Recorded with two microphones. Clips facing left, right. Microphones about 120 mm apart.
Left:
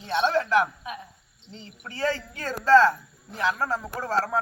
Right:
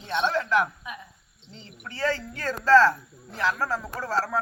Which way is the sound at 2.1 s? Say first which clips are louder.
Right 1 dB; 20° left (ahead or behind).